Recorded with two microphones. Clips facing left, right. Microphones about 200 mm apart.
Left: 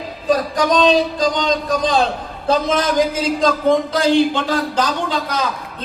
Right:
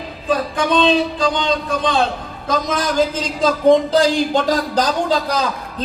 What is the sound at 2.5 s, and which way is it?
Speech, 25° left (ahead or behind).